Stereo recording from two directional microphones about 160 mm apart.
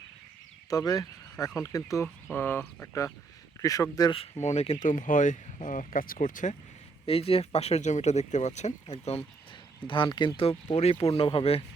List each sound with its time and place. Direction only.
0.7 s speech: 20° left (ahead or behind)
4.4 s speech: 45° left (ahead or behind)
7.0 s speech: 35° left (ahead or behind)
9.8 s speech: 30° left (ahead or behind)